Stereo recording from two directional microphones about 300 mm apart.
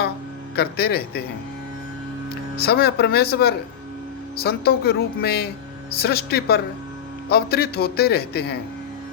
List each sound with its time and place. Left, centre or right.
0.5 s a man's voice: left
2.6 s a man's voice: left